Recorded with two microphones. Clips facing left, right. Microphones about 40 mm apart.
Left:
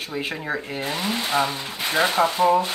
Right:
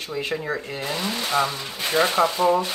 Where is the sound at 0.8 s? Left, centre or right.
Left.